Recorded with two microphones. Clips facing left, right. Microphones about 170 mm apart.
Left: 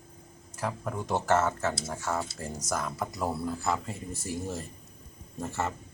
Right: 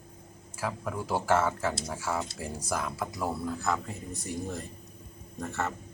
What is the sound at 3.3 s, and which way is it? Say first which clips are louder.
A man's voice: even; 5° left (ahead or behind).